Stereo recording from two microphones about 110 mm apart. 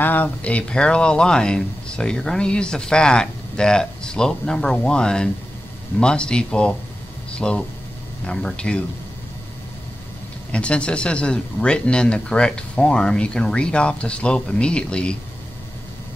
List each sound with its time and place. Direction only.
0.0 s speech: 15° left (ahead or behind)
10.5 s speech: 10° left (ahead or behind)